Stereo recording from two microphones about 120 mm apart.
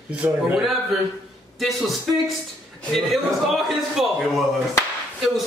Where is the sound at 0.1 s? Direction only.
10° right (ahead or behind).